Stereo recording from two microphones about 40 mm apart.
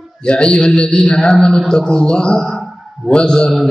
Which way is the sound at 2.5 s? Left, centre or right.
Centre.